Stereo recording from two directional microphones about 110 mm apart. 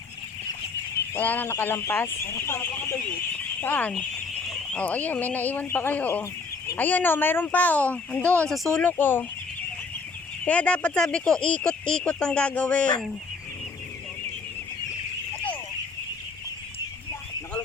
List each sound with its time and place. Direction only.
1.1 s speech: 15° left (ahead or behind)
8.8 s speech: 20° left (ahead or behind)
10.4 s speech: 10° left (ahead or behind)